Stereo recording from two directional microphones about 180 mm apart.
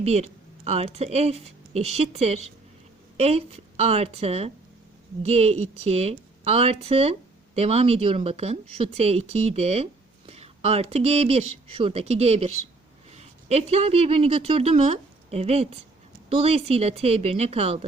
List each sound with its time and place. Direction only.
0.0 s a woman's voice: 35° right (ahead or behind)